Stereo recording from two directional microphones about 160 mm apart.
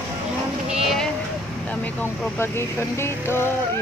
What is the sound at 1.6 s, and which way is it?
Speech, 10° left (ahead or behind).